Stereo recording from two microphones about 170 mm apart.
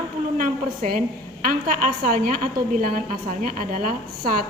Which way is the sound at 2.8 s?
55° right (ahead or behind).